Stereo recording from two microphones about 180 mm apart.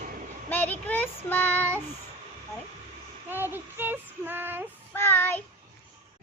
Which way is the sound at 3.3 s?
10° right (ahead or behind).